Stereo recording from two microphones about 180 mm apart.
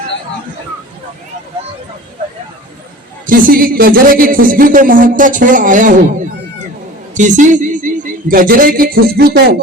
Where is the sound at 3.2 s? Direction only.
50° right (ahead or behind).